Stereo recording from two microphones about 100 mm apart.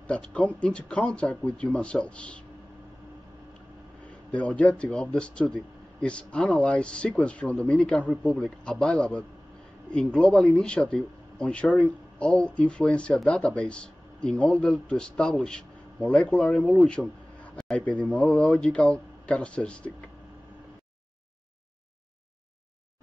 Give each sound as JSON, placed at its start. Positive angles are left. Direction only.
{"t": 0.1, "sound": "speech", "side_deg": 10}
{"t": 4.3, "sound": "speech", "side_deg": 10}